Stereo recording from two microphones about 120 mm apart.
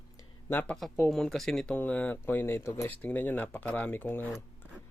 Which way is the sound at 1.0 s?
5° left (ahead or behind).